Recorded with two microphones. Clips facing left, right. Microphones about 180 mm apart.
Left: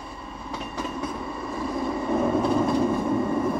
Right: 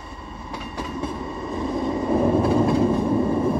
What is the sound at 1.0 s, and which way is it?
Train, 25° right (ahead or behind).